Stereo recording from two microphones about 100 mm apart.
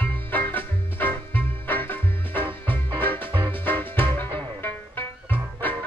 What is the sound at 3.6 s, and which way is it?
Music, 20° left (ahead or behind).